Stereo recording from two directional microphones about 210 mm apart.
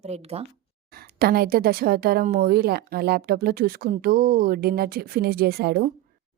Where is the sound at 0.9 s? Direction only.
50° right (ahead or behind).